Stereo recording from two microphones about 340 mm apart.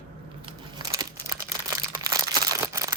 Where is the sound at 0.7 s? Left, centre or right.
Centre.